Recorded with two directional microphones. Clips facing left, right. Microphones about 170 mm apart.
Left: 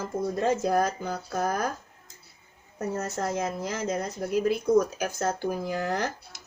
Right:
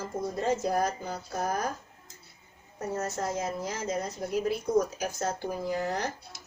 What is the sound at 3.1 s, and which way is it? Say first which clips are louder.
Speech: left 2 dB; 55° left (ahead or behind).